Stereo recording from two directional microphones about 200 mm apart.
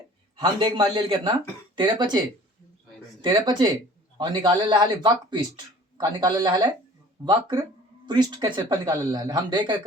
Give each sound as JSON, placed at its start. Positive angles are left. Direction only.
{"t": 0.3, "sound": "speech", "side_deg": -25}